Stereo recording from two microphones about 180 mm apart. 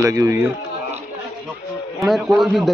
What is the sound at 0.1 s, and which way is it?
Speech, 15° right (ahead or behind).